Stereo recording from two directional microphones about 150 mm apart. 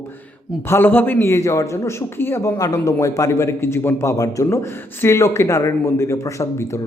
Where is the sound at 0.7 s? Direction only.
15° left (ahead or behind).